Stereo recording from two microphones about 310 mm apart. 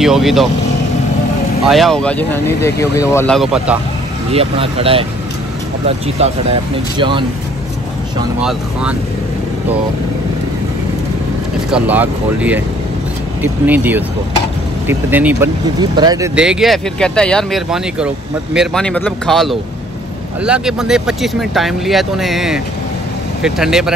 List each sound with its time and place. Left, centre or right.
0.0 s speech: centre
1.7 s speech: centre
4.3 s speech: centre
8.4 s speech: centre
11.7 s speech: centre